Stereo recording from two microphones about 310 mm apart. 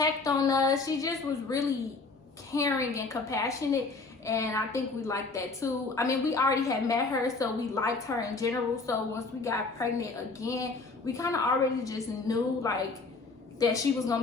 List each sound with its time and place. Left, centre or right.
0.0 s a woman's voice: centre